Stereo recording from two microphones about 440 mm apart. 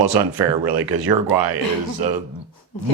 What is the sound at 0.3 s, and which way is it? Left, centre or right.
Speech, centre.